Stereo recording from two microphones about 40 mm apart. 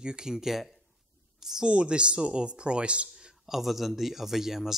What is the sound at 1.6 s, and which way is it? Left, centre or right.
Speech, right.